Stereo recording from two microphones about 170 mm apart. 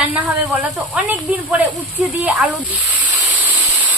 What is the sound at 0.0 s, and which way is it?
Speech, 10° right (ahead or behind).